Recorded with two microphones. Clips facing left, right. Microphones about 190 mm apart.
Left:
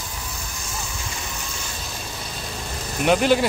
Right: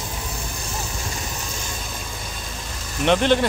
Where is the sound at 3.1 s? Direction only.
5° left (ahead or behind).